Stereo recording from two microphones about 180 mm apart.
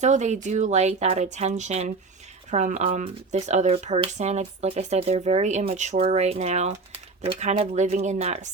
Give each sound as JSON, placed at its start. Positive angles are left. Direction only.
{"t": 0.0, "sound": "speech", "side_deg": -40}